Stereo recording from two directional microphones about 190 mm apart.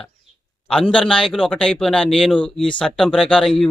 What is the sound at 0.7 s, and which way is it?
Speech, 5° left (ahead or behind).